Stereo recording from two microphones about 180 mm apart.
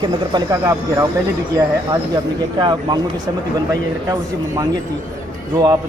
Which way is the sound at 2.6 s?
25° right (ahead or behind).